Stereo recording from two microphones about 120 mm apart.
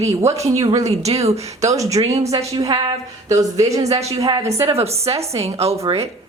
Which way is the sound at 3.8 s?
60° right (ahead or behind).